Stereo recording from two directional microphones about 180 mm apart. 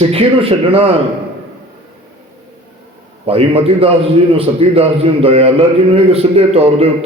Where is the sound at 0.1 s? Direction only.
30° right (ahead or behind).